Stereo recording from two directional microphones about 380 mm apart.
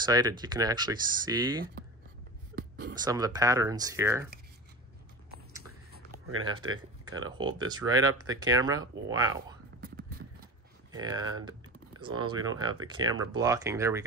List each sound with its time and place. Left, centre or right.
0.0 s speech: centre
2.5 s a sound: right
3.0 s speech: centre
6.2 s speech: right
7.2 s speech: centre
9.8 s whispering: right
10.9 s speech: centre